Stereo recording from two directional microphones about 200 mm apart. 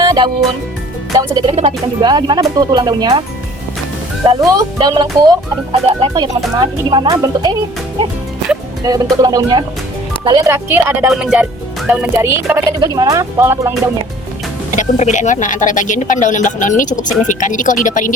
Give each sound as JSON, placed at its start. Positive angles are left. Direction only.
{"t": 0.0, "sound": "music", "side_deg": -20}
{"t": 1.1, "sound": "speech", "side_deg": -20}
{"t": 4.4, "sound": "speech", "side_deg": -20}
{"t": 8.8, "sound": "speech", "side_deg": -20}
{"t": 14.8, "sound": "speech", "side_deg": 35}